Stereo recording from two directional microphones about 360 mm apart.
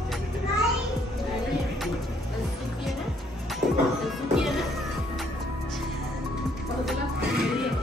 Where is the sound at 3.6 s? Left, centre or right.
Centre.